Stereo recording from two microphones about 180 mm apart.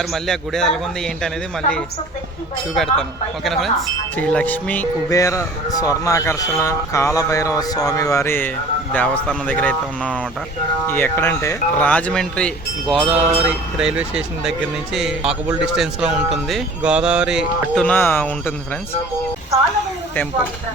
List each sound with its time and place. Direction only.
0.0 s speech: centre (ahead or behind)
2.7 s a man's voice: centre (ahead or behind)
13.1 s speech: 5° right (ahead or behind)
17.8 s a man's voice: 10° left (ahead or behind)